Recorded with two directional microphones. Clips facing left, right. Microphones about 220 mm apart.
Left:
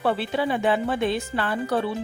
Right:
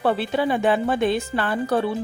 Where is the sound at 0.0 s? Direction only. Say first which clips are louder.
Right 3 dB; 45° right (ahead or behind).